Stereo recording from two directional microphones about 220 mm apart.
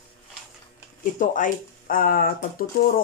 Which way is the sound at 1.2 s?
35° left (ahead or behind).